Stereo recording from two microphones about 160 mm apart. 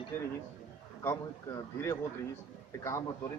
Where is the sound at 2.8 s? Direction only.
20° left (ahead or behind).